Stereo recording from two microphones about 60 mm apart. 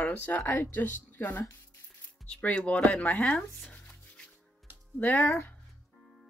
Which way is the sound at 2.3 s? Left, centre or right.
Left.